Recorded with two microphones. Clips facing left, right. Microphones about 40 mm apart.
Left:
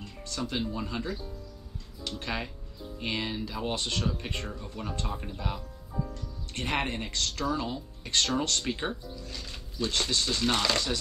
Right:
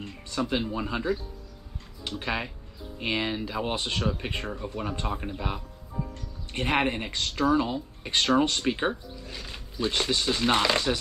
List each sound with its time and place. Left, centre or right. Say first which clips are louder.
0.3 s speech: right 4 dB; centre